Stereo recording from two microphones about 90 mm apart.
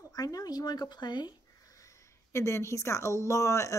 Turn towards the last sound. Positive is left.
turn(degrees=35)  # may be behind; listen again after turning